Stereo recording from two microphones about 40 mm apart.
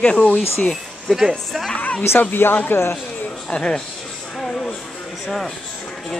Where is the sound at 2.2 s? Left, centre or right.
Left.